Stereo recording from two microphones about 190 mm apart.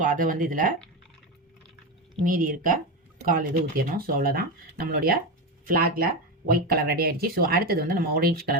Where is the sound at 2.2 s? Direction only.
45° right (ahead or behind).